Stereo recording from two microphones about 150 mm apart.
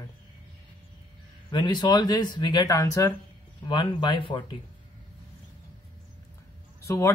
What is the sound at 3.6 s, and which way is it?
Speech, 30° left (ahead or behind).